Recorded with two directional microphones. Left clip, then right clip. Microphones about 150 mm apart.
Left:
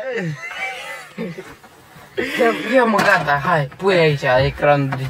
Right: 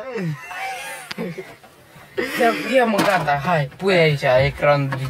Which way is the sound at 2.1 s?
15° right (ahead or behind).